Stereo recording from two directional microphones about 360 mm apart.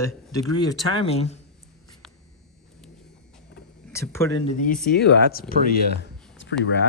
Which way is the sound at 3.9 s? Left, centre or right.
Centre.